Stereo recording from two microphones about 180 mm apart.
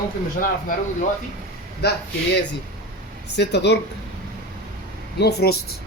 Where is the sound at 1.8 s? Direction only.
65° left (ahead or behind).